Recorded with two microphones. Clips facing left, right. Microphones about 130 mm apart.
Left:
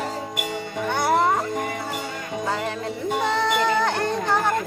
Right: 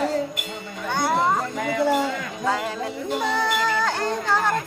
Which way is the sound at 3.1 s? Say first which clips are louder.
Left 2 dB; 60° left (ahead or behind).